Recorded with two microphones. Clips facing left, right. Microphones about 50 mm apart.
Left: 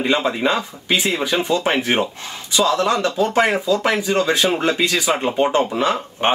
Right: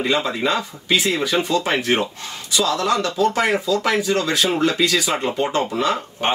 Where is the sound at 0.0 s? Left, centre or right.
Left.